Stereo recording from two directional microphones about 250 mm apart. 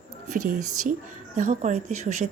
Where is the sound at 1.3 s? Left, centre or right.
Right.